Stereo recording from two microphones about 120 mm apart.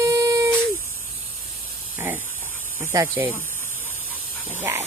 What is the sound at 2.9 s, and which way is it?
Speech, 30° right (ahead or behind).